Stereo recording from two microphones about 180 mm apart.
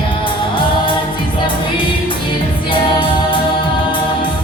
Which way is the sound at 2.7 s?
30° left (ahead or behind).